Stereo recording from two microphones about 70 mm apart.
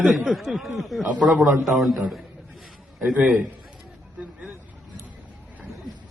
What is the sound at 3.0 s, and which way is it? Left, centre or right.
Speech, centre.